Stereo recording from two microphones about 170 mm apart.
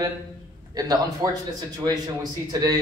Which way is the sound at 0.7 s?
20° right (ahead or behind).